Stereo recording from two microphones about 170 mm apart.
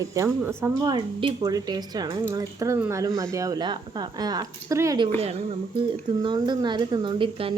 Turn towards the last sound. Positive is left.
turn(degrees=-30)  # may be behind; listen again after turning